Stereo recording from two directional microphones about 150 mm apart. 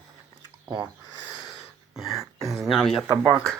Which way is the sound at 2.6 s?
Centre (ahead or behind).